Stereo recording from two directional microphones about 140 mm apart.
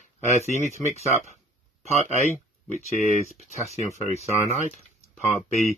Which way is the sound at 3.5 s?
55° left (ahead or behind).